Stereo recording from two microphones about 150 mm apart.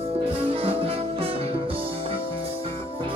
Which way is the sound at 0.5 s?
40° right (ahead or behind).